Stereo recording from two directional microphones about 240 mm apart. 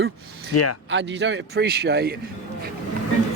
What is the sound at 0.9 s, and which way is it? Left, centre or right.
Speech, right.